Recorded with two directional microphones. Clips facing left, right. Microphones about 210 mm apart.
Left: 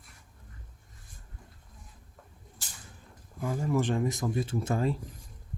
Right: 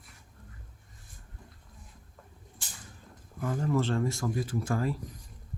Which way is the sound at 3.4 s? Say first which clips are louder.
Even; 10° left (ahead or behind).